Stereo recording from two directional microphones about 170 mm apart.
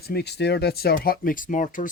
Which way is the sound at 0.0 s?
70° left (ahead or behind).